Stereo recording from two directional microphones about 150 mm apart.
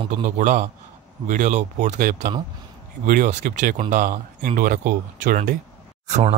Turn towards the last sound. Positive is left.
turn(degrees=-45)  # may be behind; listen again after turning